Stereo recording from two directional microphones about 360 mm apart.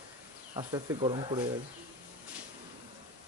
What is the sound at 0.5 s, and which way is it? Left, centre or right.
Speech, centre.